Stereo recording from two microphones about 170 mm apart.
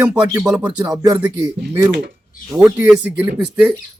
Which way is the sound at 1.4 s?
15° right (ahead or behind).